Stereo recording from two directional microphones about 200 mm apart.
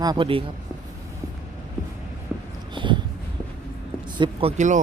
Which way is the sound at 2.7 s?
25° right (ahead or behind).